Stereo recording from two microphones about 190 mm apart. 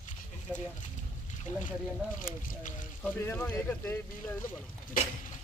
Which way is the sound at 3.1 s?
10° left (ahead or behind).